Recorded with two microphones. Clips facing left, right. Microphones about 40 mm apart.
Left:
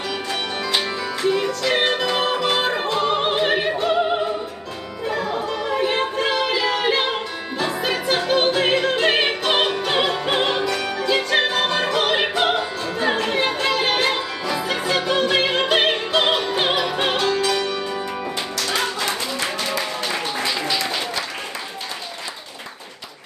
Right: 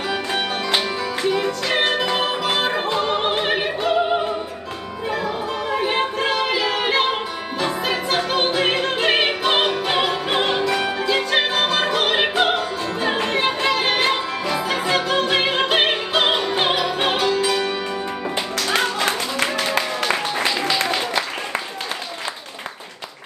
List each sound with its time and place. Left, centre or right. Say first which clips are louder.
0.1 s music: right 4 dB; right
0.7 s music: right 1 dB; centre
3.4 s opera: left 1 dB; centre
5.0 s music: left 1 dB; centre
15.7 s opera: even; centre
16.7 s music: even; centre
17.1 s music: right 1 dB; centre
18.9 s a sound: right 3 dB; right